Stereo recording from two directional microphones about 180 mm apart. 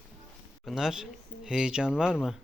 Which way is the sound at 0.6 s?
Centre (ahead or behind).